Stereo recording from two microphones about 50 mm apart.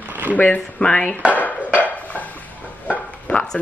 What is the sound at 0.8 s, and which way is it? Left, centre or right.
Speech, centre.